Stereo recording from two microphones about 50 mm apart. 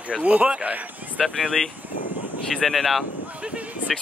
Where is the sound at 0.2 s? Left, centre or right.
Right.